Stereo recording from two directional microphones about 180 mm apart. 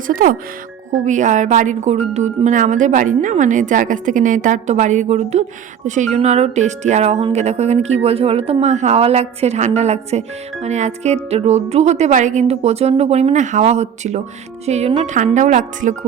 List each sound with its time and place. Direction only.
0.1 s a woman's voice: 50° right (ahead or behind)